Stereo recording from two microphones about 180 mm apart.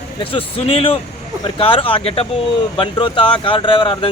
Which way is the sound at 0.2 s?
30° left (ahead or behind).